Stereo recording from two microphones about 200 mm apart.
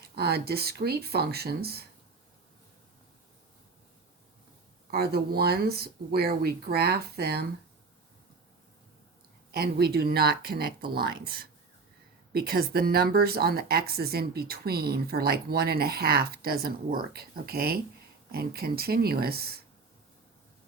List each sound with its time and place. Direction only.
0.0 s speech: 50° right (ahead or behind)
4.9 s speech: 50° right (ahead or behind)
9.5 s speech: 50° right (ahead or behind)